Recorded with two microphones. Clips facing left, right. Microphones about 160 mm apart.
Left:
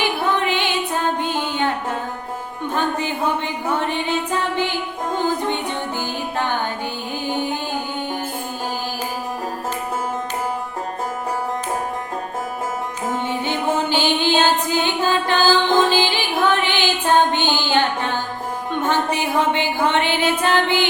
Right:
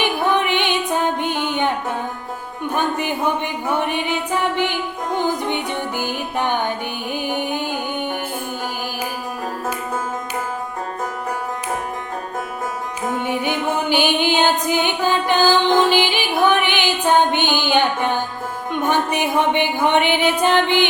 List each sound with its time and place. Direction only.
0.0 s music: 15° right (ahead or behind)
2.7 s music: 15° right (ahead or behind)
13.2 s music: 15° right (ahead or behind)